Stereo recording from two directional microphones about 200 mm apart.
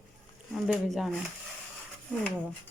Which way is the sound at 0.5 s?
Centre (ahead or behind).